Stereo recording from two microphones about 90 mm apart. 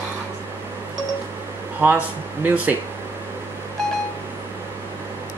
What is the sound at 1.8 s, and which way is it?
Speech, 20° right (ahead or behind).